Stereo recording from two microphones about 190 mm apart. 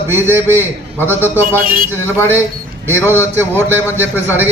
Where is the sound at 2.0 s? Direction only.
15° left (ahead or behind).